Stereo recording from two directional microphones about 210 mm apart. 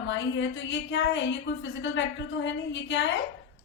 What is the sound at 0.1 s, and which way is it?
A woman's voice, 65° left (ahead or behind).